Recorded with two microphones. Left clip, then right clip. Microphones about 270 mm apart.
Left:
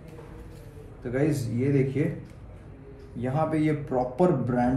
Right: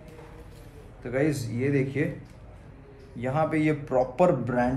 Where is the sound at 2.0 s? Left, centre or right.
Centre.